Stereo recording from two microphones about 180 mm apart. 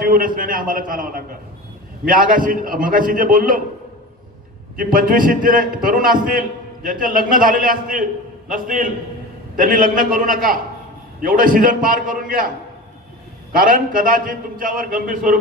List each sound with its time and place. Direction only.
0.0 s a man's voice: 50° right (ahead or behind)
4.7 s a man's voice: 50° right (ahead or behind)
13.5 s a man's voice: 50° right (ahead or behind)